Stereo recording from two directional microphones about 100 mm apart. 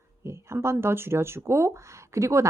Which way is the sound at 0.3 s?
25° right (ahead or behind).